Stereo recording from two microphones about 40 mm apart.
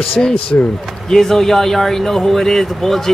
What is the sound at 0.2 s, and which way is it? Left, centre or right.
Speech, left.